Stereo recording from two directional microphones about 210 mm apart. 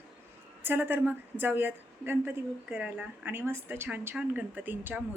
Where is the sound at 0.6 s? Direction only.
10° right (ahead or behind).